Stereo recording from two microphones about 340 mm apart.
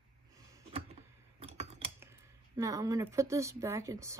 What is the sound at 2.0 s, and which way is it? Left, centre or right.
Speech, centre.